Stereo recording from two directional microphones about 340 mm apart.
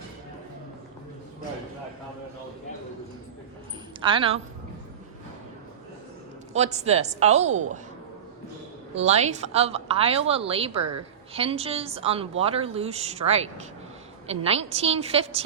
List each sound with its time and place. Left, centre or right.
4.0 s a woman's voice: centre
6.5 s a woman's voice: centre
9.0 s a woman's voice: centre